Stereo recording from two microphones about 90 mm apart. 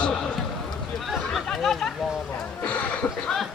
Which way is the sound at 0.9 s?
Centre (ahead or behind).